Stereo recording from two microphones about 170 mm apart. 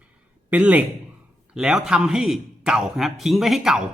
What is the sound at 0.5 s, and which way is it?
A man's voice, 10° right (ahead or behind).